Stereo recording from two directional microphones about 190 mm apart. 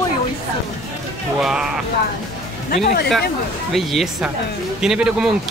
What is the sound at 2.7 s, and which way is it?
Speech, 45° left (ahead or behind).